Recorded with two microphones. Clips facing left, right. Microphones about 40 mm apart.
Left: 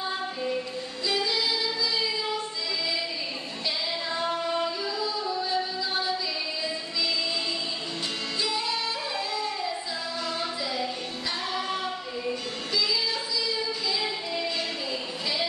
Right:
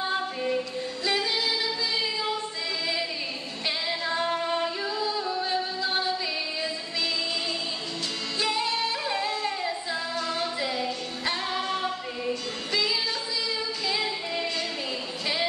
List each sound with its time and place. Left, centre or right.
0.0 s female singing: right
1.0 s a capella: right
3.6 s music: right
8.4 s music: right
12.7 s music: right